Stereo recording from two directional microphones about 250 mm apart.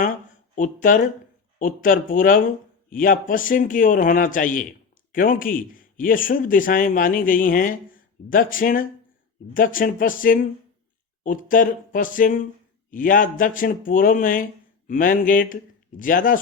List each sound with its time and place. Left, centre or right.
0.5 s a man's voice: left